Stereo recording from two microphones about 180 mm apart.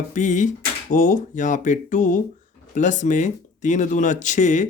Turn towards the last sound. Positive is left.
turn(degrees=45)  # may be behind; listen again after turning